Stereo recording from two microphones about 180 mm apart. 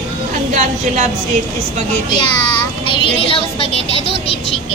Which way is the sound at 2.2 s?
25° left (ahead or behind).